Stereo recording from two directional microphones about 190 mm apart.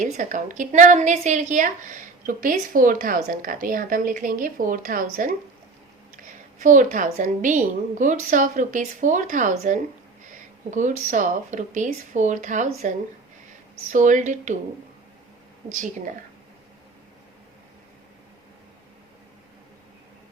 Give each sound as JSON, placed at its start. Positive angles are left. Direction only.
{"t": 0.0, "sound": "a woman's voice", "side_deg": -40}
{"t": 6.6, "sound": "a woman's voice", "side_deg": -40}
{"t": 13.9, "sound": "a woman's voice", "side_deg": -40}
{"t": 15.7, "sound": "a woman's voice", "side_deg": -40}